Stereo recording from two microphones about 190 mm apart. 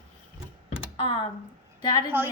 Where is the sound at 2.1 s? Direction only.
10° right (ahead or behind).